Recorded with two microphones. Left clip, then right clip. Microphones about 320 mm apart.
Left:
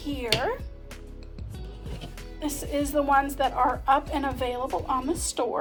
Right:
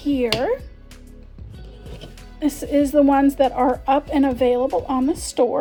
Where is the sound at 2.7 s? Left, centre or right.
Right.